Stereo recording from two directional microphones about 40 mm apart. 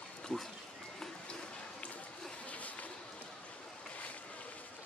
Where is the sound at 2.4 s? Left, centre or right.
Left.